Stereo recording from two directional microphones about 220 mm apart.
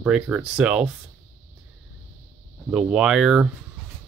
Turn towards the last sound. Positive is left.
turn(degrees=-5)  # may be behind; listen again after turning